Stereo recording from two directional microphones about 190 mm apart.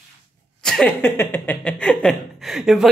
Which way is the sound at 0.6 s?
5° left (ahead or behind).